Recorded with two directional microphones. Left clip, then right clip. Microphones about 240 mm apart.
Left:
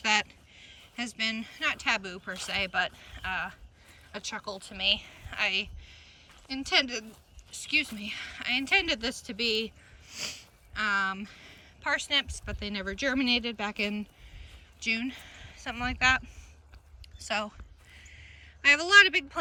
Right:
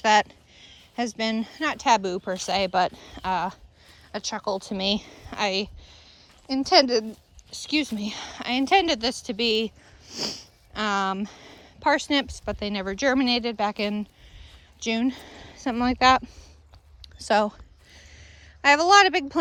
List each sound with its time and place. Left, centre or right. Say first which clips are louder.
0.0 s speech: right 7 dB; centre
15.0 s speech: right 9 dB; right
15.9 s speech: right 7 dB; centre
17.2 s speech: right 10 dB; right
17.9 s a sound: right 1 dB; centre